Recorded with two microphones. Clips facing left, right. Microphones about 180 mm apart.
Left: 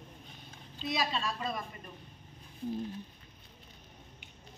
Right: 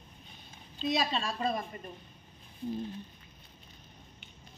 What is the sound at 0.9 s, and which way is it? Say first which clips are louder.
Speech: right 2 dB; 25° right (ahead or behind).